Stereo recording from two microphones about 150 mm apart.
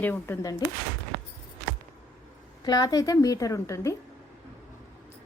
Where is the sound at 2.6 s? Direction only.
25° left (ahead or behind).